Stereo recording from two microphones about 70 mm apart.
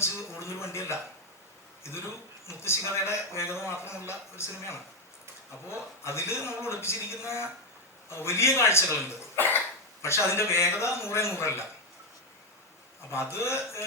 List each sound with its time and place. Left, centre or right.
0.0 s a man's voice: left
2.5 s a man's voice: left
10.0 s a man's voice: left
13.1 s a man's voice: left